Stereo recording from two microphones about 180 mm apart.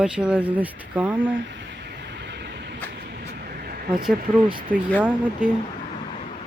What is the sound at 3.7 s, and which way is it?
Vehicle, 55° right (ahead or behind).